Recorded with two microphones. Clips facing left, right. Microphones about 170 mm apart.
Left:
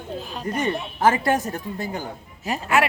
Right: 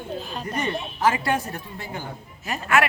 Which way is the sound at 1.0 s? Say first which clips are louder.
Left 3 dB; 45° left (ahead or behind).